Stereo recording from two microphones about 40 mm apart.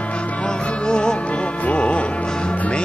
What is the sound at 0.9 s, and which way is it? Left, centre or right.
Music, centre.